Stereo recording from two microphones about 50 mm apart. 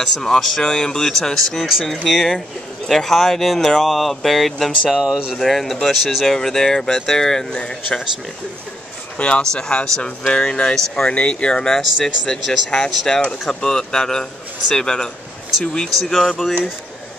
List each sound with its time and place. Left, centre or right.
0.0 s speech: centre
4.9 s speech: centre
5.4 s speech: centre
9.2 s speech: centre
16.0 s speech: centre